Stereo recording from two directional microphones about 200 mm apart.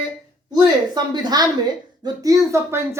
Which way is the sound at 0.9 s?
20° right (ahead or behind).